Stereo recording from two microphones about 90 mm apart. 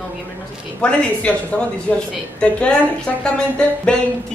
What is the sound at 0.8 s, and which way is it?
Speech, 10° left (ahead or behind).